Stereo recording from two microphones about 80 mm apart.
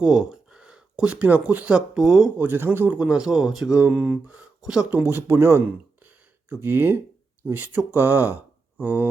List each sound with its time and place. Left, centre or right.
0.0 s speech: centre
2.0 s speech: centre
2.4 s speech: right; by 3.8 s centre
3.8 s speech: right
4.6 s speech: centre
4.9 s speech: right